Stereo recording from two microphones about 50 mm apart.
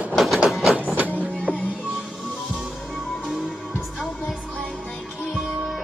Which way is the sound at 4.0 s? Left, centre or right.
Left.